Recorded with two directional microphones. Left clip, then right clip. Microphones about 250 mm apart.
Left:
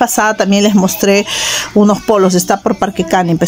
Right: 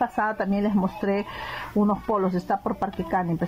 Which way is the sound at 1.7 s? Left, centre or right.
Left.